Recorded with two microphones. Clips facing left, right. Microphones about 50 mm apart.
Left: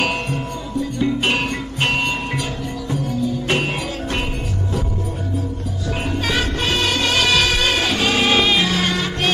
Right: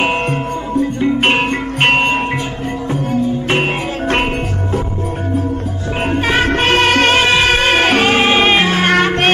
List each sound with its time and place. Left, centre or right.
0.0 s music: right
6.0 s music: right
7.2 s music: right
8.9 s music: right